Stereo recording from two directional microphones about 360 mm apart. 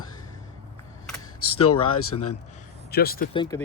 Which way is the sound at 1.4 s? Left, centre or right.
Left.